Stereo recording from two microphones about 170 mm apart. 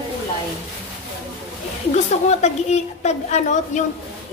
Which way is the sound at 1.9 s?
40° left (ahead or behind).